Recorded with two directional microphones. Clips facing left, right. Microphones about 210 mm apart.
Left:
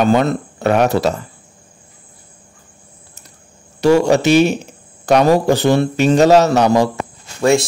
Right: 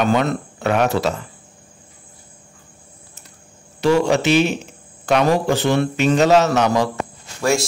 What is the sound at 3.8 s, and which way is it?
A man's voice, 40° left (ahead or behind).